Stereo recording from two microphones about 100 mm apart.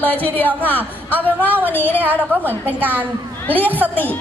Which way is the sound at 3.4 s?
20° left (ahead or behind).